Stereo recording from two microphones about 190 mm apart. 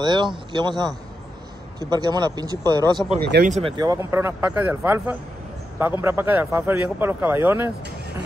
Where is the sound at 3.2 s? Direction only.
60° right (ahead or behind).